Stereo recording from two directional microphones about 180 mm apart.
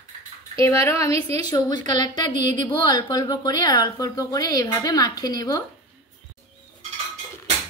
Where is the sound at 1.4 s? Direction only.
20° left (ahead or behind).